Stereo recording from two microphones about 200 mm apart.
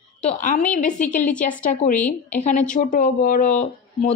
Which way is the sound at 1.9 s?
10° left (ahead or behind).